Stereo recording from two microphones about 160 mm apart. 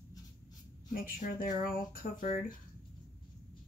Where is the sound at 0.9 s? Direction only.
60° left (ahead or behind).